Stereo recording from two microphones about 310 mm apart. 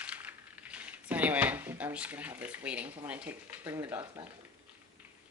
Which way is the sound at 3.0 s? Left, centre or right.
Centre.